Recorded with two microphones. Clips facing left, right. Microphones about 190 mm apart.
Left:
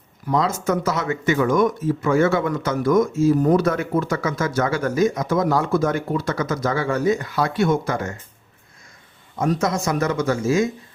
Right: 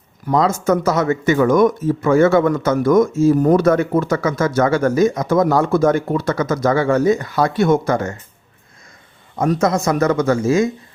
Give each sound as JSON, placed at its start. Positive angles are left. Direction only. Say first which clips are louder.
{"t": 0.3, "sound": "speech", "louder": "right 5 dB", "side_deg": -40}
{"t": 9.4, "sound": "speech", "louder": "right 4 dB", "side_deg": -50}